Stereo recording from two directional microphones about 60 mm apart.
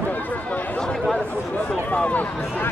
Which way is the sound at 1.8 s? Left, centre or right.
Left.